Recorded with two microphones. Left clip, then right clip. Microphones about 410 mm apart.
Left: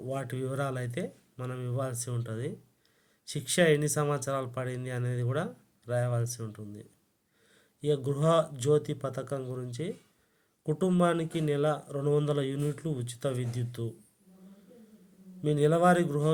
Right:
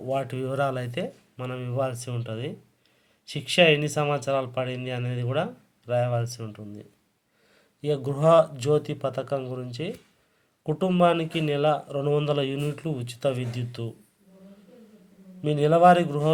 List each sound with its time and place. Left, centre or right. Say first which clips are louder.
0.1 s speech: right 8 dB; left
15.4 s speech: right 6 dB; left